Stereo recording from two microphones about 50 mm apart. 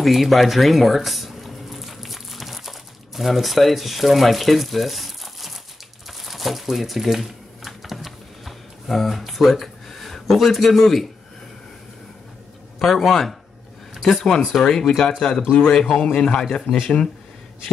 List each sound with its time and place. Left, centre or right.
0.0 s a sound: centre
3.2 s speech: centre
6.0 s typewriter: centre
12.7 s speech: centre
16.6 s speech: centre